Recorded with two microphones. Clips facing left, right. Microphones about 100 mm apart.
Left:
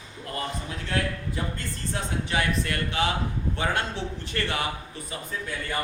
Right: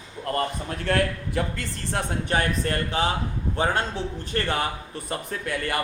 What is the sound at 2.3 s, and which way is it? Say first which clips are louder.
A man's voice: right 2 dB; 40° right (ahead or behind).